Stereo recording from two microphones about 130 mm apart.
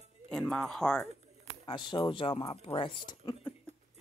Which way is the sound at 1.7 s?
35° left (ahead or behind).